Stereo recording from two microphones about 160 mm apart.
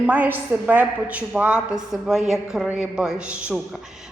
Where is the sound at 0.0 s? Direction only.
10° right (ahead or behind).